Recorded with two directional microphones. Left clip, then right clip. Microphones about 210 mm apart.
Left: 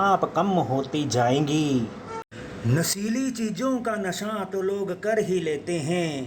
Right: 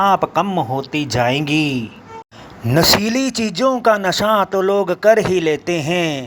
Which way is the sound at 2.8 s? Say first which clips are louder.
Right 15 dB; 40° right (ahead or behind).